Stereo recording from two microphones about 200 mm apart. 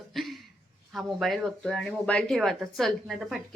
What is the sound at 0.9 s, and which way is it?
Speech, centre (ahead or behind).